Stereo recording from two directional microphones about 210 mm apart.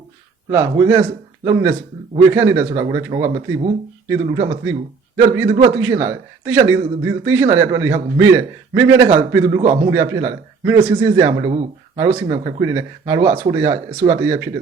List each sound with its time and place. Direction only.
0.5 s a man's voice: 15° right (ahead or behind)